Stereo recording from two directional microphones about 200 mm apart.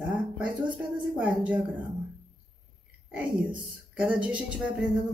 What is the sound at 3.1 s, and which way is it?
A woman's voice, 5° right (ahead or behind).